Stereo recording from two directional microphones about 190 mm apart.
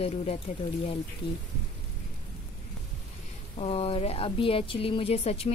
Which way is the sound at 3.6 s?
30° left (ahead or behind).